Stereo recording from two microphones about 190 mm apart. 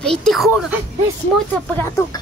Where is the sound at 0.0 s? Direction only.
5° left (ahead or behind).